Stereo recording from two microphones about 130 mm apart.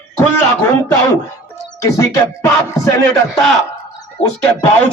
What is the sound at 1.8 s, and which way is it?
Speech, 25° left (ahead or behind).